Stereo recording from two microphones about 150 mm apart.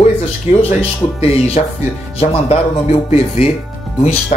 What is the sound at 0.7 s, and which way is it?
Speech, 40° left (ahead or behind).